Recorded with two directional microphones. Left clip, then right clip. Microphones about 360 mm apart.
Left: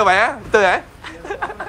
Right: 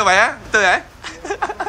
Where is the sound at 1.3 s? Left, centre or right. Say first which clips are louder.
Right 3 dB; centre.